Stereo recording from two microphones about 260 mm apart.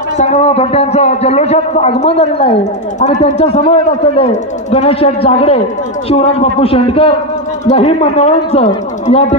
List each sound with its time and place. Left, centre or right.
0.2 s a man's voice: left